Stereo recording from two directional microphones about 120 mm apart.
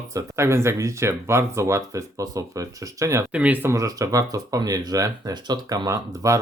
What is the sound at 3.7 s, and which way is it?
Speech, 25° right (ahead or behind).